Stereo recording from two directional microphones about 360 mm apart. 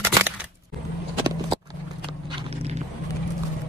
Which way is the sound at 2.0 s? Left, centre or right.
Centre.